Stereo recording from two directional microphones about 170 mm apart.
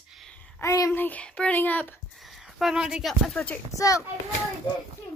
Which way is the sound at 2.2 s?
Centre (ahead or behind).